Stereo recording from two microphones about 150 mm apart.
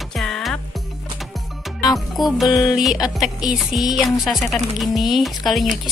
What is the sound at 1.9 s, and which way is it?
Speech, centre (ahead or behind).